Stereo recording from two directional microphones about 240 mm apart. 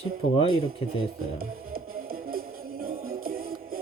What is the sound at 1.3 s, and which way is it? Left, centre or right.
Music, right.